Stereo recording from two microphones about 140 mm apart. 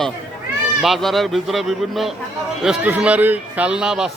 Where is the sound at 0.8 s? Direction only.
Centre (ahead or behind).